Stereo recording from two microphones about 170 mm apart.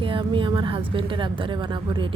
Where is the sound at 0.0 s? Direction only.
30° right (ahead or behind).